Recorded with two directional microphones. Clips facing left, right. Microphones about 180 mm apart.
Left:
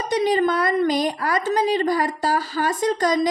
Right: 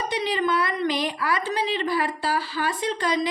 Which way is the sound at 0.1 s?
45° left (ahead or behind).